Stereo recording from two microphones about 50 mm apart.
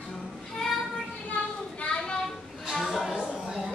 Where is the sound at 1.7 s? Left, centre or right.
Centre.